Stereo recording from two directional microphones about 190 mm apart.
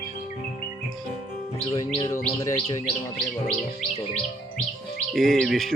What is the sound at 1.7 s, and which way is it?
Speech, 25° left (ahead or behind).